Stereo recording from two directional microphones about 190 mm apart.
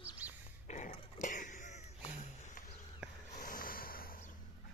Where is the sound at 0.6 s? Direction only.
40° left (ahead or behind).